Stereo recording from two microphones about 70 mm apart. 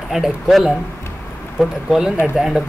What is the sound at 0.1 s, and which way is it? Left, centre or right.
Speech, centre.